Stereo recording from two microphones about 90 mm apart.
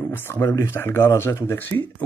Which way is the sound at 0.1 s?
30° left (ahead or behind).